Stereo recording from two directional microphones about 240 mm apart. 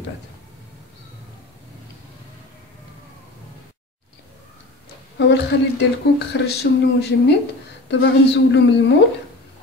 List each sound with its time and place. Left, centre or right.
5.2 s speech: left